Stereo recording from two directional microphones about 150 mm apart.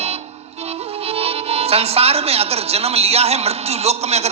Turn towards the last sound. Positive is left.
turn(degrees=-45)  # may be behind; listen again after turning